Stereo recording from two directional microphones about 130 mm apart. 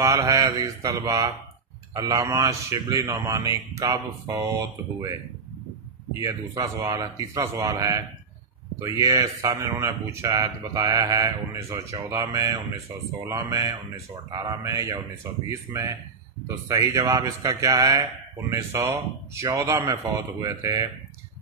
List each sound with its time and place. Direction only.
0.0 s speech: 25° right (ahead or behind)
6.2 s speech: 25° right (ahead or behind)